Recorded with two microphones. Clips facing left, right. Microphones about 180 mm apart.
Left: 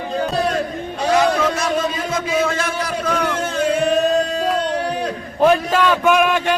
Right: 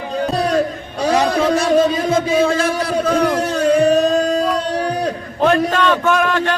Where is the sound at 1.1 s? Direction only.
35° right (ahead or behind).